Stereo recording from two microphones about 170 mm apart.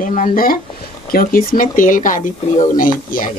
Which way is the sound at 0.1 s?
50° left (ahead or behind).